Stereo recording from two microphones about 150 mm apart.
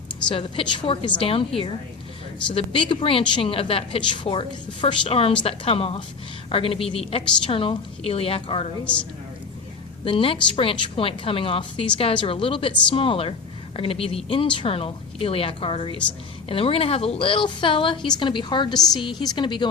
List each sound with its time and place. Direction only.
0.3 s a woman's voice: 35° left (ahead or behind)
10.0 s a woman's voice: 35° left (ahead or behind)